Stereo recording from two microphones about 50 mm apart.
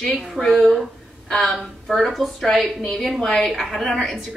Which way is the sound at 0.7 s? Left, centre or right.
Centre.